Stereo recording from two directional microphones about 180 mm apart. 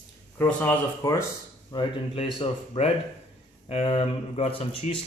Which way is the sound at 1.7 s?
30° left (ahead or behind).